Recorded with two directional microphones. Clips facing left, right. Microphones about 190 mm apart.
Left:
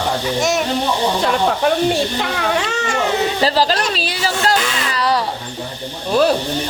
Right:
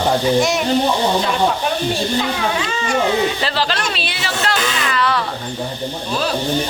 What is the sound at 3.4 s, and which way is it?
Speech, 40° left (ahead or behind).